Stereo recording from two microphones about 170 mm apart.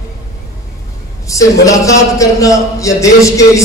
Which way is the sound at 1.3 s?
20° left (ahead or behind).